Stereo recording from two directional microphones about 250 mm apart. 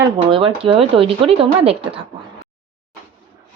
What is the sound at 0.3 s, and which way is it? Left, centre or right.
Speech, centre.